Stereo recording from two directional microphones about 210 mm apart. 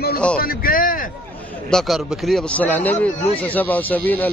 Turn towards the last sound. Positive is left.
turn(degrees=10)  # may be behind; listen again after turning